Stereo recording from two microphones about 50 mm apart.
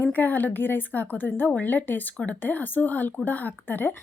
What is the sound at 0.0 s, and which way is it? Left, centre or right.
A woman's voice, left.